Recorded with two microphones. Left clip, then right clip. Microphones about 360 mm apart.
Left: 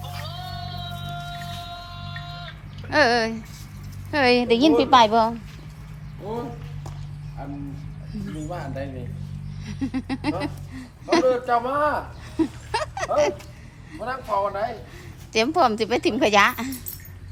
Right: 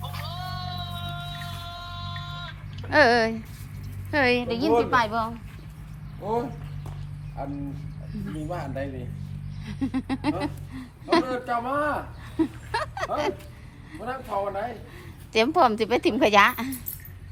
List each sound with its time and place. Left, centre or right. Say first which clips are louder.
1.4 s music: left 2 dB; right
2.9 s a woman's voice: even; centre
8.1 s a woman's voice: even; centre
12.4 s a sound: left 2 dB; centre
13.9 s a woman's voice: left 4 dB; centre